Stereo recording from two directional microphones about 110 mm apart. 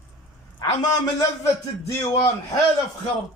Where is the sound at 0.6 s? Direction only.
40° left (ahead or behind).